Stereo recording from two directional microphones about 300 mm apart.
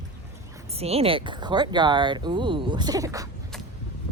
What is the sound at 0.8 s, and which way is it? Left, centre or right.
Speech, centre.